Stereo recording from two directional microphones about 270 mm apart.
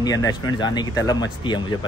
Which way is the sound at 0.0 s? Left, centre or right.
Centre.